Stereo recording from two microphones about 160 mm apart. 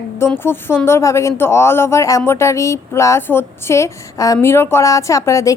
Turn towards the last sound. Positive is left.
turn(degrees=20)  # may be behind; listen again after turning